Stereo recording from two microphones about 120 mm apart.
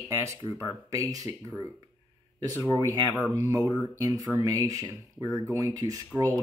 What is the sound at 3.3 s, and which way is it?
Speech, 25° right (ahead or behind).